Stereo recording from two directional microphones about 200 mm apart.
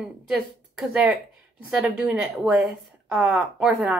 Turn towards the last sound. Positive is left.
turn(degrees=0)  # may be behind; listen again after turning